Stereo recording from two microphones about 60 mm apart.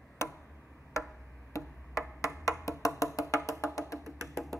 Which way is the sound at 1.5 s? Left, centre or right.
Left.